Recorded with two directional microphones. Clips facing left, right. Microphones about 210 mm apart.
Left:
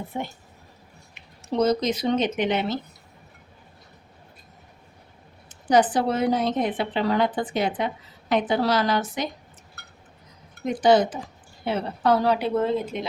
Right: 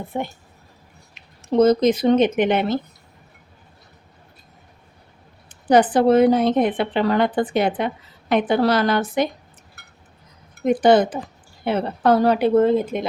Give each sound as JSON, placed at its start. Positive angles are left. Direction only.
{"t": 0.1, "sound": "a woman's voice", "side_deg": -50}
{"t": 1.5, "sound": "a woman's voice", "side_deg": -50}
{"t": 5.5, "sound": "a woman's voice", "side_deg": -60}
{"t": 10.7, "sound": "a woman's voice", "side_deg": -55}